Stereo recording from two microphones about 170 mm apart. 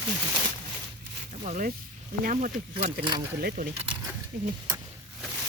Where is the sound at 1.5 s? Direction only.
50° right (ahead or behind).